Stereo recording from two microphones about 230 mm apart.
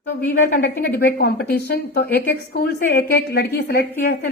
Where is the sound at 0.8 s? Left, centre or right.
Left.